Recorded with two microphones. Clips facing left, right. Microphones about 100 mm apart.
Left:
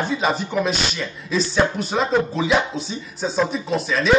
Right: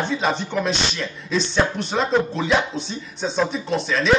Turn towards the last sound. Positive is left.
turn(degrees=0)  # may be behind; listen again after turning